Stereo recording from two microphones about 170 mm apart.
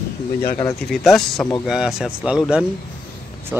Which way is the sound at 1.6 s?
5° right (ahead or behind).